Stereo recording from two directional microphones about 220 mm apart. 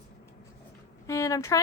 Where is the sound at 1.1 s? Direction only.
15° left (ahead or behind).